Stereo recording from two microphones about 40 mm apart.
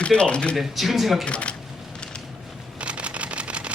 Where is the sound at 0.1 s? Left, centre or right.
Left.